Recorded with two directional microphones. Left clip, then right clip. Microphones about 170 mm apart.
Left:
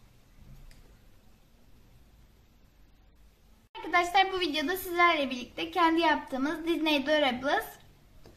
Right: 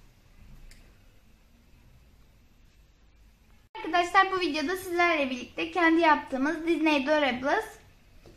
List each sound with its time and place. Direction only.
3.9 s a woman's voice: 30° right (ahead or behind)